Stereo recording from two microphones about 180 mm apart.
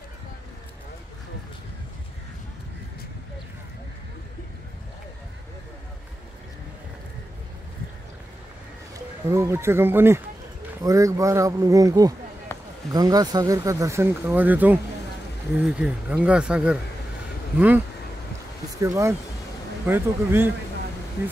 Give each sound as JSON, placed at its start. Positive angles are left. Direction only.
{"t": 8.9, "sound": "speech", "side_deg": -15}
{"t": 12.5, "sound": "basketball bounce", "side_deg": 15}
{"t": 12.9, "sound": "speech", "side_deg": -20}